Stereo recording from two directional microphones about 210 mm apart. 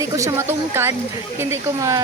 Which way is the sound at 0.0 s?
15° right (ahead or behind).